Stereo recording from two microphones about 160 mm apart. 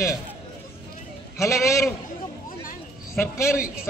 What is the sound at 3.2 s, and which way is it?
Speech, 15° left (ahead or behind).